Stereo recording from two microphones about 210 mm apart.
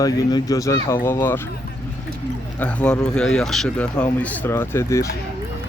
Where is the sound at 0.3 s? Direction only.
20° left (ahead or behind).